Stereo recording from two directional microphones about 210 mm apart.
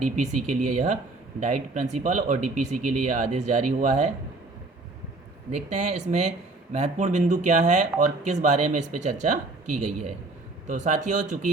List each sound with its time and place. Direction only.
0.0 s speech: 35° right (ahead or behind)
5.5 s speech: 35° right (ahead or behind)